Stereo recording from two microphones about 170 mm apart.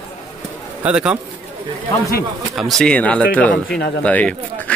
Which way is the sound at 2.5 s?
Centre (ahead or behind).